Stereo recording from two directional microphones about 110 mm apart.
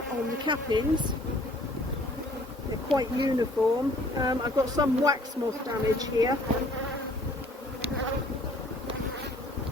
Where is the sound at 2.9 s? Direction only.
40° right (ahead or behind).